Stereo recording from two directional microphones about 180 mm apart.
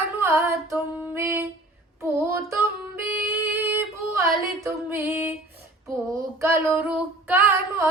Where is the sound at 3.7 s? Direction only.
15° right (ahead or behind).